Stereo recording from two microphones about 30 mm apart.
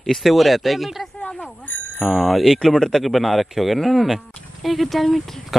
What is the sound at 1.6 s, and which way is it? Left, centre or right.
Bicycle bell, left.